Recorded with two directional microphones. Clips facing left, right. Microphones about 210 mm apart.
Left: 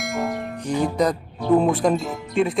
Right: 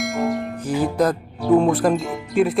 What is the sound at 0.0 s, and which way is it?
Speech, centre (ahead or behind).